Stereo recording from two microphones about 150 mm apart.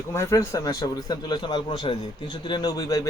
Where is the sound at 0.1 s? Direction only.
20° left (ahead or behind).